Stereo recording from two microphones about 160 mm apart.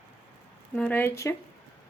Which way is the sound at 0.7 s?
10° left (ahead or behind).